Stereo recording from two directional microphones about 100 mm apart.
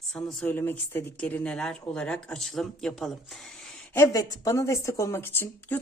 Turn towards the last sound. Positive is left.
turn(degrees=25)  # may be behind; listen again after turning